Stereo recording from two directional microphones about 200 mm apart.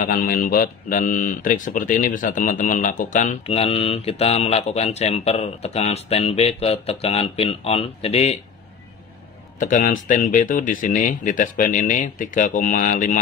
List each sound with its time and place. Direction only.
0.0 s speech: 45° left (ahead or behind)
9.6 s speech: 40° left (ahead or behind)